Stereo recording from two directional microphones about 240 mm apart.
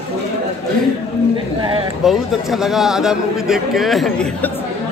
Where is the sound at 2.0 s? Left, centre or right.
Centre.